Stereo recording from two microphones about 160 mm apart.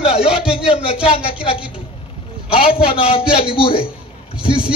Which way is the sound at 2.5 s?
35° left (ahead or behind).